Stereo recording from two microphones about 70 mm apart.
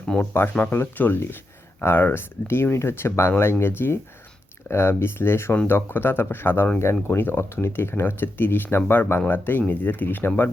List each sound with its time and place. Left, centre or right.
0.1 s speech: centre
0.7 s speech: left